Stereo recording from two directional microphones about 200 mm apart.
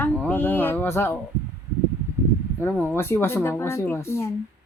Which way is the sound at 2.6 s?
10° left (ahead or behind).